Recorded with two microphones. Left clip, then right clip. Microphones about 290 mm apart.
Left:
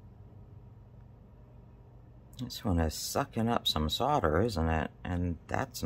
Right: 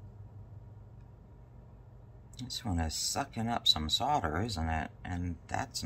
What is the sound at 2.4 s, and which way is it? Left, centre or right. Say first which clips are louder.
Speech: left 4 dB; left.